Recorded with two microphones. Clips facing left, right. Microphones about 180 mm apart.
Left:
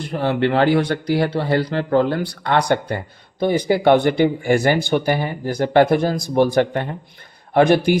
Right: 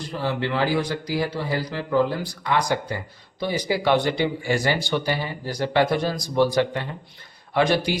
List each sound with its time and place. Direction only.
0.0 s speech: 60° left (ahead or behind)